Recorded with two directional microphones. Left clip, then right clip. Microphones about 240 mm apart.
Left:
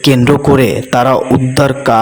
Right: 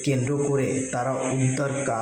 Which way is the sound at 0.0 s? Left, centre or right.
Left.